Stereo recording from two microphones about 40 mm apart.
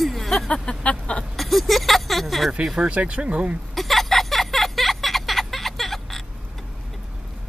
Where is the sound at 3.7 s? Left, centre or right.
Centre.